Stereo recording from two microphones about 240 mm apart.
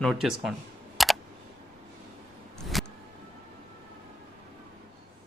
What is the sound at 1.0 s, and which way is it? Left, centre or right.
Computer keyboard, centre.